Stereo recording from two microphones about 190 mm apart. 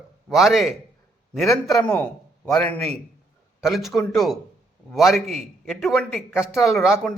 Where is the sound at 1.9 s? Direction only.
5° left (ahead or behind).